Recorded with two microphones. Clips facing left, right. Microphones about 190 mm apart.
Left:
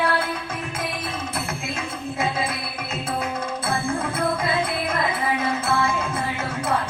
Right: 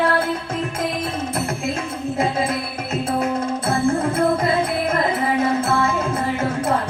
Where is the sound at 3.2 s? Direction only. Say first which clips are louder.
Right 6 dB; 50° right (ahead or behind).